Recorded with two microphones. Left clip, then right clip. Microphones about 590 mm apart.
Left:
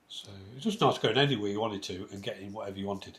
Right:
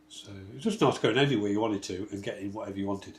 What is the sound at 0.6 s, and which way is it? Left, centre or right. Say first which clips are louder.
Speech: right 1 dB; centre.